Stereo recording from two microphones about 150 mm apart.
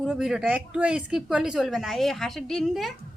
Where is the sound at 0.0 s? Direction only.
5° right (ahead or behind).